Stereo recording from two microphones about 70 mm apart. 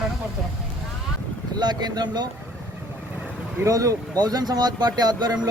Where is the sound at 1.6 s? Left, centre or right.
Right.